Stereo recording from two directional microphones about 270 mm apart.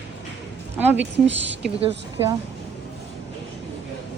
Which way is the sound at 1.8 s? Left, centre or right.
Centre.